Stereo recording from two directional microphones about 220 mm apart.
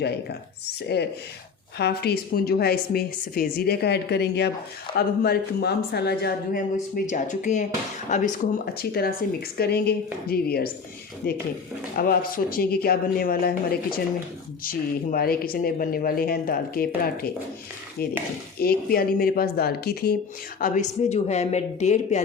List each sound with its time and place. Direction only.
1.8 s speech: 45° left (ahead or behind)
6.9 s speech: 35° left (ahead or behind)
18.6 s speech: 45° left (ahead or behind)